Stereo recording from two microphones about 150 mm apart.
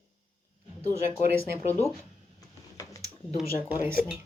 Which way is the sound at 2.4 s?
20° left (ahead or behind).